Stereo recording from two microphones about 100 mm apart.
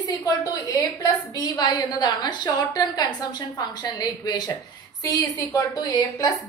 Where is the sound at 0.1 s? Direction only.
40° left (ahead or behind).